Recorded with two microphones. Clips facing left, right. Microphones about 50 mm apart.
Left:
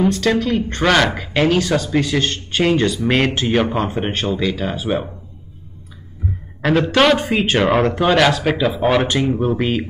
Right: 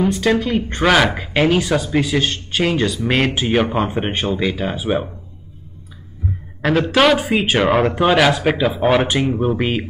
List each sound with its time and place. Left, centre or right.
0.1 s speech: centre
6.6 s speech: centre